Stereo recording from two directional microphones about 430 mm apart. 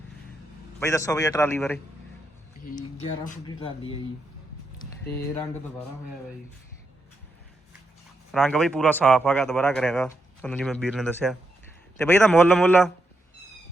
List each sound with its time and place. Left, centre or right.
0.8 s a man's voice: centre
3.2 s a man's voice: centre
8.3 s a man's voice: centre